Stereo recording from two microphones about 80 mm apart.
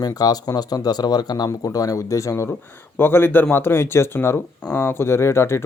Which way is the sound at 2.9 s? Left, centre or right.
Left.